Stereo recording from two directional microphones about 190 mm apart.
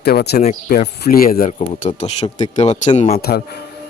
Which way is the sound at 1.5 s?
35° left (ahead or behind).